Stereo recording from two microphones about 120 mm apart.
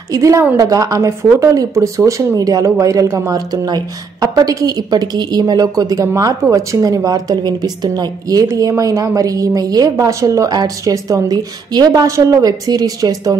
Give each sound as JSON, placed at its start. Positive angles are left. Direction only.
{"t": 0.1, "sound": "speech", "side_deg": -25}